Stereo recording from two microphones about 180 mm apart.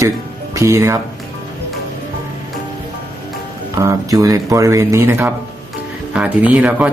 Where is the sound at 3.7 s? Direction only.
20° right (ahead or behind).